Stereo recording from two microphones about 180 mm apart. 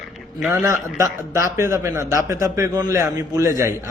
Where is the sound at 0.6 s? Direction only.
15° right (ahead or behind).